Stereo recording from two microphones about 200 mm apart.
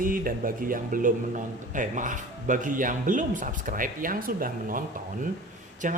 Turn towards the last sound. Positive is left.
turn(degrees=-40)  # may be behind; listen again after turning